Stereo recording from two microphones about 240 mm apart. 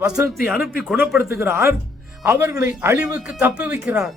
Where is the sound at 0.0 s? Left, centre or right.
Centre.